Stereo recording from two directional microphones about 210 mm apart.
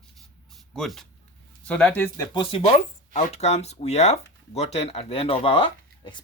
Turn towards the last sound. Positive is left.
turn(degrees=25)  # may be behind; listen again after turning